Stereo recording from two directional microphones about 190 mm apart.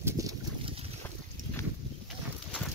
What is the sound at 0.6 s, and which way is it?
Boat, 30° right (ahead or behind).